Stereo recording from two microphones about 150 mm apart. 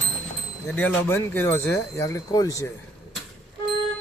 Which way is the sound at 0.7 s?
10° left (ahead or behind).